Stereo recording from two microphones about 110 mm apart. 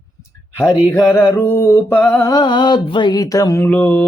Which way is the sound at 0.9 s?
20° left (ahead or behind).